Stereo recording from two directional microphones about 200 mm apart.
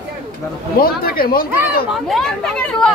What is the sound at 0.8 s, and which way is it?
Speech, 50° left (ahead or behind).